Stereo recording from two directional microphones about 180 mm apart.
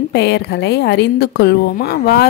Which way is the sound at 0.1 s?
70° left (ahead or behind).